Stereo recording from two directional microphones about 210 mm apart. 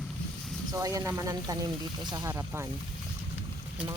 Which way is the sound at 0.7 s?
15° right (ahead or behind).